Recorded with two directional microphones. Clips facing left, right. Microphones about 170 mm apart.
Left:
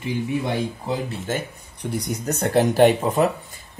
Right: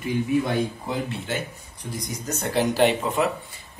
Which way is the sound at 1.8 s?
65° left (ahead or behind).